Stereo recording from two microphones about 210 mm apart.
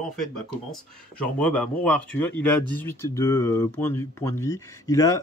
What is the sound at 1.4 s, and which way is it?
Speech, 5° left (ahead or behind).